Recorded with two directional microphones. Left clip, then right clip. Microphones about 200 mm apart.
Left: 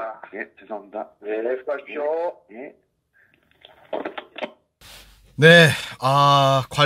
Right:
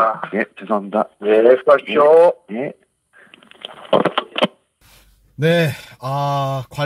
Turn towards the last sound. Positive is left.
turn(degrees=0)  # may be behind; listen again after turning